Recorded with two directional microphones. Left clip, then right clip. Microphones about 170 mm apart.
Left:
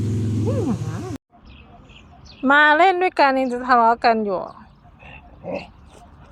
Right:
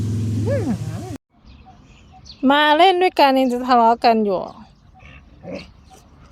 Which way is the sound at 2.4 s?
35° right (ahead or behind).